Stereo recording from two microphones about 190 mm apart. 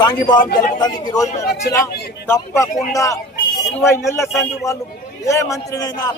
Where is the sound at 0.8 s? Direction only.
20° left (ahead or behind).